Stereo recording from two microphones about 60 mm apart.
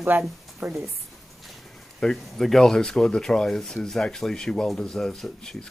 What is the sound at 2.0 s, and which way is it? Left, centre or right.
Speech, centre.